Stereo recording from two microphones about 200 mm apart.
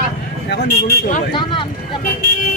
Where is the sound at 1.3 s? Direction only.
25° left (ahead or behind).